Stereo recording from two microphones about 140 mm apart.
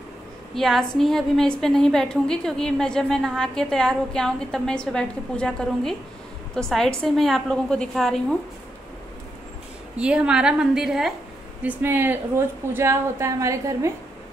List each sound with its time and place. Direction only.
0.6 s a woman's voice: centre (ahead or behind)
9.9 s a woman's voice: 5° right (ahead or behind)
11.6 s a woman's voice: 15° right (ahead or behind)